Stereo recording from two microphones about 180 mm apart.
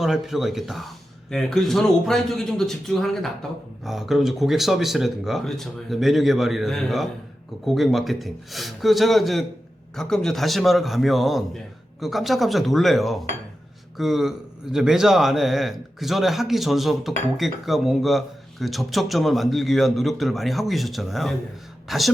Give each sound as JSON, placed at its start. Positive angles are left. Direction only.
{"t": 0.0, "sound": "a man's voice", "side_deg": 0}